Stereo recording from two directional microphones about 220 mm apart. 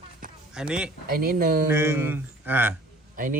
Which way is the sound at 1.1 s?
40° right (ahead or behind).